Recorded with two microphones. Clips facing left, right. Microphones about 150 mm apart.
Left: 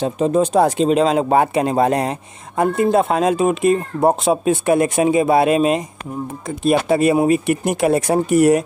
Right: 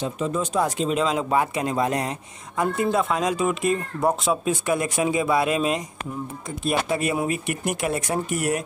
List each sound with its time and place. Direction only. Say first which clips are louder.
0.0 s speech: left 9 dB; 70° left (ahead or behind)
7.0 s speech: left 10 dB; 30° left (ahead or behind)
7.8 s speech: left 11 dB; 85° left